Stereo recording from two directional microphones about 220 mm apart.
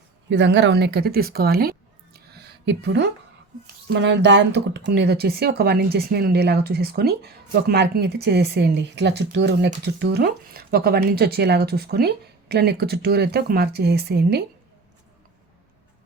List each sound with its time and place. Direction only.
0.3 s speech: 55° right (ahead or behind)